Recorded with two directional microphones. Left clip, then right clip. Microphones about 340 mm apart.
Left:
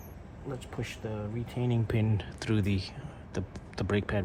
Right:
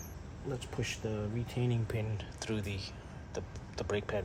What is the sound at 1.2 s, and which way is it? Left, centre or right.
Speech, centre.